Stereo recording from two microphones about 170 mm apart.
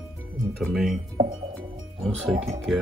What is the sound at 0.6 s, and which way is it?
Speech, centre (ahead or behind).